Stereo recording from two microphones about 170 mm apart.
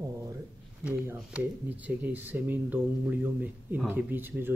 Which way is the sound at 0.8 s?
10° right (ahead or behind).